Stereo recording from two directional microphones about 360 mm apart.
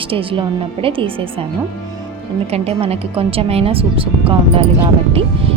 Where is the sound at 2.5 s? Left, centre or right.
Centre.